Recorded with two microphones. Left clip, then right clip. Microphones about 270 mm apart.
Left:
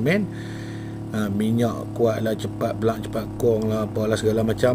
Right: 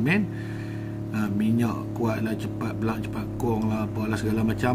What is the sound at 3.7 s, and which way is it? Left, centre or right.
Speech, centre.